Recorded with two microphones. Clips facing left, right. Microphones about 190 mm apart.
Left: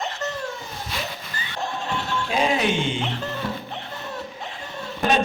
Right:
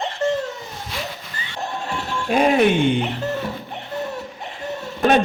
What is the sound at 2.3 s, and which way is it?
Speech, 55° right (ahead or behind).